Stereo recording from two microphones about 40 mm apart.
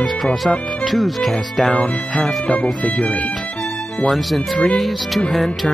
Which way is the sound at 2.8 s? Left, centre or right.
Centre.